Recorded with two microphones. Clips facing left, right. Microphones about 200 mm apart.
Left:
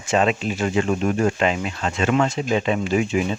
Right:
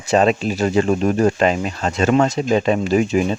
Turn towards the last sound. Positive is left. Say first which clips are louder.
# right 4 dB
turn(degrees=-40)  # may be behind; listen again after turning